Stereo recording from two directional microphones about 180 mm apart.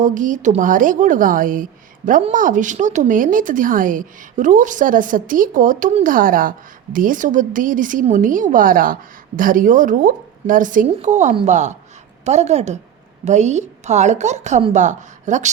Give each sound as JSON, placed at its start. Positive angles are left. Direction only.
{"t": 0.0, "sound": "a woman's voice", "side_deg": -45}